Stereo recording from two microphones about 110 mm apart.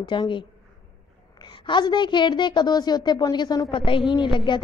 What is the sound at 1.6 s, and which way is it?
A woman's voice, 45° left (ahead or behind).